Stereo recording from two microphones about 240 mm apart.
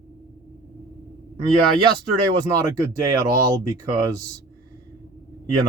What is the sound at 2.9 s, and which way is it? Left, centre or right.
Speech, centre.